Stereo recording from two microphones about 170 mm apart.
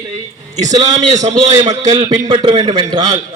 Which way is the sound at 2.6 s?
25° right (ahead or behind).